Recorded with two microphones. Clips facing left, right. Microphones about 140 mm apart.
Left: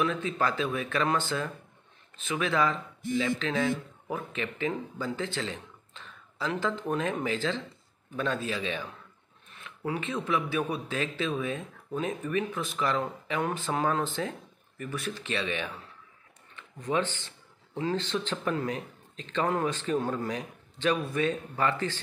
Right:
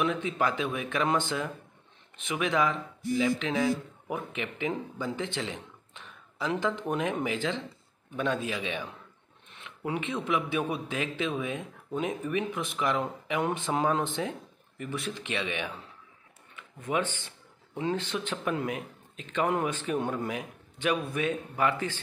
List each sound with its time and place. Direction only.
0.0 s a man's voice: 15° right (ahead or behind)